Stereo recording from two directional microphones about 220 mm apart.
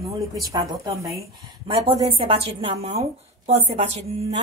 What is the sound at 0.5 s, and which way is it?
A woman's voice, 15° right (ahead or behind).